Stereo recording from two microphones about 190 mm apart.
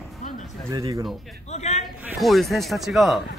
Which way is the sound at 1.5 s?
35° left (ahead or behind).